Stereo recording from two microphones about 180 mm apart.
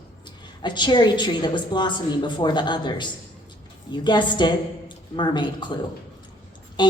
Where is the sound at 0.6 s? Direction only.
25° left (ahead or behind).